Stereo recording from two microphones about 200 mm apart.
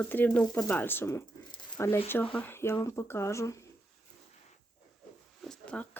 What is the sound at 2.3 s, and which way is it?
Speech, 10° left (ahead or behind).